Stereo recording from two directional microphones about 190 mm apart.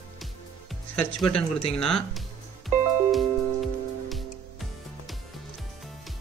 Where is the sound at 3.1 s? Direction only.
Centre (ahead or behind).